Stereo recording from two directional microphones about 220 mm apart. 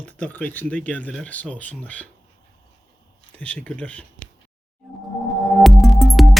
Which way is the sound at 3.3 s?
5° left (ahead or behind).